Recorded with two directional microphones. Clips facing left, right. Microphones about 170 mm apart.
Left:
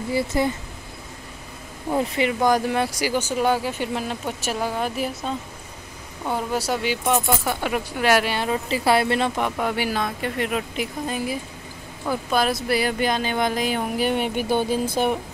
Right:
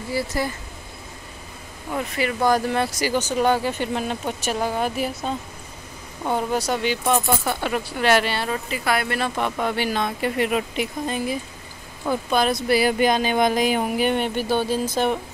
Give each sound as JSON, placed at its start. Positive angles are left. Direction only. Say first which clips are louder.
{"t": 0.1, "sound": "speech", "louder": "left 3 dB", "side_deg": 20}
{"t": 1.9, "sound": "speech", "louder": "left 3 dB", "side_deg": 25}
{"t": 6.3, "sound": "speech", "louder": "right 1 dB", "side_deg": 5}
{"t": 8.6, "sound": "speech", "louder": "left 7 dB", "side_deg": 30}
{"t": 9.4, "sound": "speech", "louder": "even", "side_deg": 10}
{"t": 10.2, "sound": "speech", "louder": "right 3 dB", "side_deg": -5}
{"t": 11.1, "sound": "speech", "louder": "right 1 dB", "side_deg": 5}
{"t": 12.8, "sound": "speech", "louder": "right 4 dB", "side_deg": -15}
{"t": 13.9, "sound": "speech", "louder": "right 1 dB", "side_deg": 5}